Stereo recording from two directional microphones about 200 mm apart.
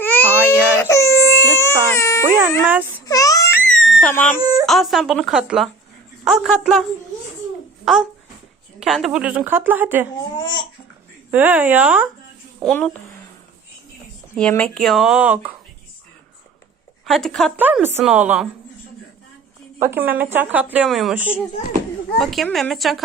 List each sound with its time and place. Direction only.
0.0 s baby cry: 10° left (ahead or behind)
2.6 s a child's voice: 10° right (ahead or behind)
3.1 s baby cry: 15° left (ahead or behind)
3.7 s crying: centre (ahead or behind)
4.1 s speech: 5° left (ahead or behind)
4.4 s speech: 20° right (ahead or behind)
4.6 s speech: centre (ahead or behind)
7.9 s speech: centre (ahead or behind)
10.3 s speech: 25° left (ahead or behind)
11.3 s speech: 10° right (ahead or behind)
12.6 s speech: 5° left (ahead or behind)
14.3 s speech: 5° left (ahead or behind)
17.1 s speech: centre (ahead or behind)
19.8 s speech: 10° right (ahead or behind)